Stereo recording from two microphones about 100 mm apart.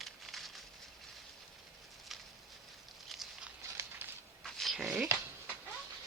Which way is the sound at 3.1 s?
Centre (ahead or behind).